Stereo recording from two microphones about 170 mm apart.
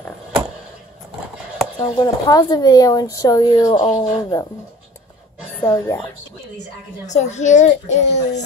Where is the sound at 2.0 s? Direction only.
20° left (ahead or behind).